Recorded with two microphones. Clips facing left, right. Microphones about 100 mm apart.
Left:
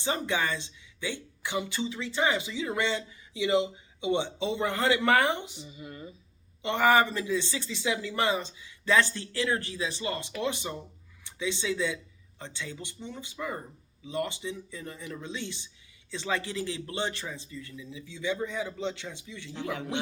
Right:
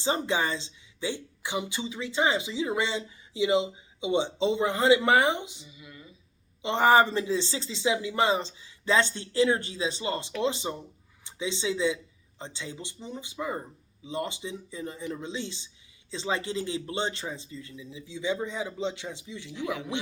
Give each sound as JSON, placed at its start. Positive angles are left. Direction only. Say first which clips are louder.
{"t": 0.0, "sound": "speech", "louder": "right 2 dB", "side_deg": -20}
{"t": 5.6, "sound": "speech", "louder": "left 6 dB", "side_deg": 40}
{"t": 6.6, "sound": "speech", "louder": "right 2 dB", "side_deg": -20}